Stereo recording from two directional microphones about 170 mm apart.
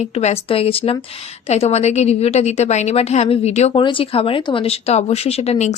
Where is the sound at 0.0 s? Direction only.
40° left (ahead or behind).